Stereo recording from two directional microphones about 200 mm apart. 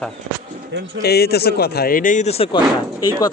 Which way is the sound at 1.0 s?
55° left (ahead or behind).